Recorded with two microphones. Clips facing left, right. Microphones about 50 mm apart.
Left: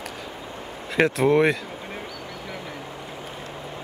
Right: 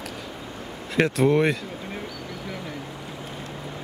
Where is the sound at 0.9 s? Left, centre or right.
Centre.